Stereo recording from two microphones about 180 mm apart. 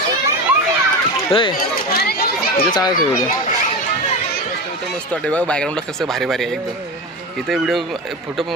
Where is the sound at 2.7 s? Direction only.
20° left (ahead or behind).